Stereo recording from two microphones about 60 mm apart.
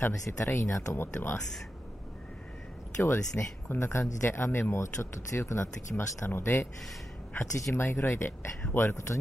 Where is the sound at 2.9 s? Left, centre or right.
Left.